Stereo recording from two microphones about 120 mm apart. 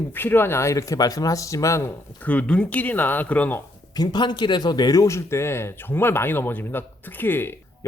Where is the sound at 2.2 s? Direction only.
10° left (ahead or behind).